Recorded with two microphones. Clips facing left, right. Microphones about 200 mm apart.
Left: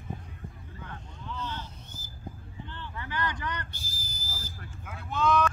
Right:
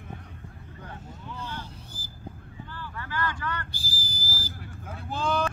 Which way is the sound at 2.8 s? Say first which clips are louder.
Right 2 dB; 20° left (ahead or behind).